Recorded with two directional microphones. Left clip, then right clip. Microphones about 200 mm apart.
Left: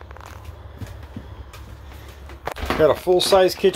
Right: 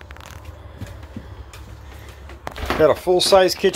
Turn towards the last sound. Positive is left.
turn(degrees=0)  # may be behind; listen again after turning